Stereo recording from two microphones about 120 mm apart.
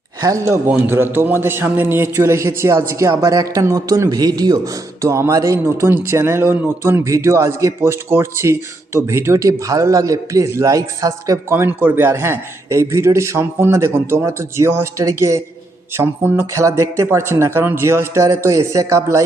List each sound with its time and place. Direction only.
0.2 s a man's voice: 25° right (ahead or behind)